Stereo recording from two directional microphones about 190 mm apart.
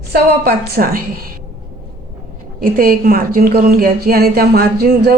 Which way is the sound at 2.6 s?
50° right (ahead or behind).